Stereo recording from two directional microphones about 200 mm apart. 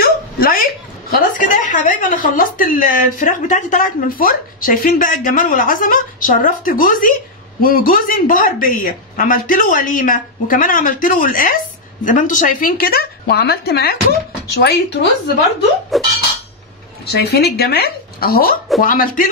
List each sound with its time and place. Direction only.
0.0 s a sound: 45° left (ahead or behind)
1.4 s a woman's voice: 40° left (ahead or behind)
15.9 s speech: centre (ahead or behind)
17.0 s speech: 55° left (ahead or behind)